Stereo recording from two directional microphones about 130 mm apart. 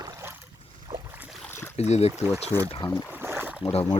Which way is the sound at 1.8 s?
55° left (ahead or behind).